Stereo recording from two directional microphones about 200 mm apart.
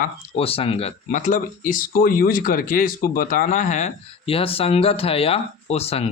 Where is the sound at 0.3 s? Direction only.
30° left (ahead or behind).